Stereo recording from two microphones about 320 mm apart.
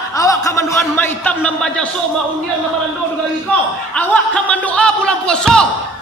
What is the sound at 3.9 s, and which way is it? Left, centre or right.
Speech, centre.